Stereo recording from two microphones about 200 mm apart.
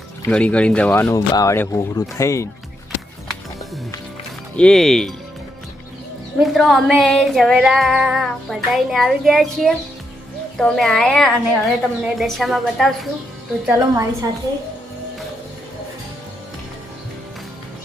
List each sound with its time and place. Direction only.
0.3 s speech: 5° left (ahead or behind)
4.5 s female singing: 5° left (ahead or behind)
6.4 s female singing: centre (ahead or behind)
13.7 s a woman's voice: 15° right (ahead or behind)